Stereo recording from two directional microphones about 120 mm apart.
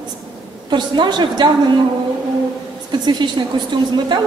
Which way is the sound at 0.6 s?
40° right (ahead or behind).